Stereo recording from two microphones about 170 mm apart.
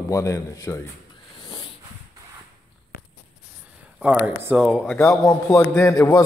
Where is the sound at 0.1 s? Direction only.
20° left (ahead or behind).